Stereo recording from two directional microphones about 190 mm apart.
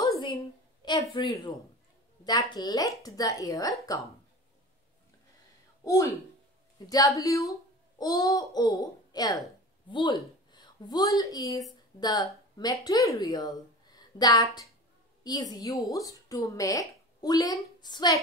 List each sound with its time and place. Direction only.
0.0 s a sound: 20° left (ahead or behind)
1.1 s a child's voice: 25° left (ahead or behind)
6.9 s a woman's voice: 20° left (ahead or behind)